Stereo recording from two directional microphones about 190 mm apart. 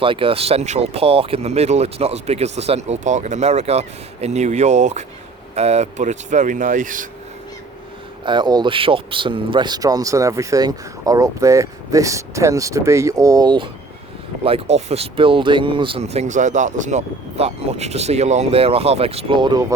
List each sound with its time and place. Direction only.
0.0 s speech: 30° right (ahead or behind); by 7.1 s 45° right (ahead or behind)
8.2 s speech: 25° right (ahead or behind)